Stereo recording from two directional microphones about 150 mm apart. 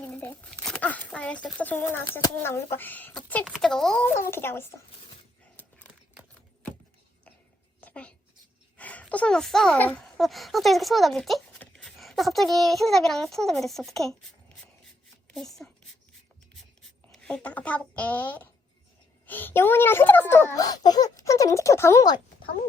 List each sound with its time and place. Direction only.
0.0 s a sound: 10° left (ahead or behind)
0.7 s speech: 10° left (ahead or behind)
3.4 s a child's voice: centre (ahead or behind); by 4.7 s 15° left (ahead or behind)
5.6 s a sound: 10° left (ahead or behind)
7.8 s a sound: 10° left (ahead or behind)
8.8 s a child's voice: 10° left (ahead or behind)
15.3 s a woman's voice: centre (ahead or behind)
17.1 s speech: 5° left (ahead or behind)
20.7 s speech: 25° left (ahead or behind)